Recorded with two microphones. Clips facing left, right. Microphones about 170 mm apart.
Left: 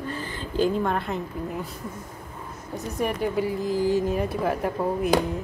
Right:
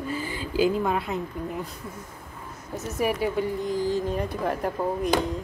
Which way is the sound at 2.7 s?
5° right (ahead or behind).